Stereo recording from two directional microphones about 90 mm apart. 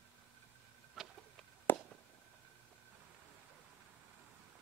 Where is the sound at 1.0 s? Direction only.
5° right (ahead or behind).